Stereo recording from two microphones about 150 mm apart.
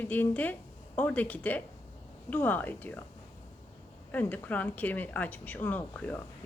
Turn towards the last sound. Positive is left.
turn(degrees=10)  # may be behind; listen again after turning